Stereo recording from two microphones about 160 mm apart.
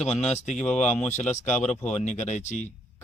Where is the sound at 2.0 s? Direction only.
45° left (ahead or behind).